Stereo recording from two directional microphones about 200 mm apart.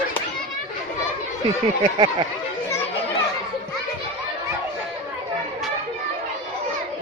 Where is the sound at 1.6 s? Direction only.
25° right (ahead or behind).